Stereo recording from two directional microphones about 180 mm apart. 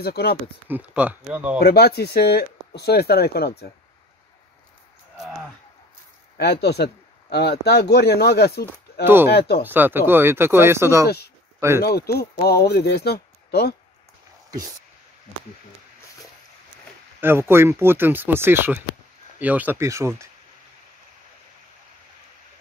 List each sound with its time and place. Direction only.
0.0 s speech: 60° left (ahead or behind)
0.7 s speech: 10° right (ahead or behind)
1.6 s speech: 60° left (ahead or behind)
6.3 s speech: 65° left (ahead or behind)
9.0 s speech: 10° right (ahead or behind)
11.8 s speech: 60° left (ahead or behind)
17.2 s speech: 15° right (ahead or behind)